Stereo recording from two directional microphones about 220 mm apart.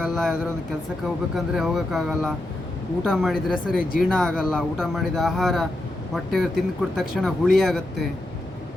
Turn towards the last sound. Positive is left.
turn(degrees=0)  # may be behind; listen again after turning